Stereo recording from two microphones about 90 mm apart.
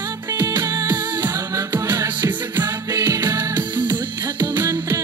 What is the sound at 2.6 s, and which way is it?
Music, 40° right (ahead or behind).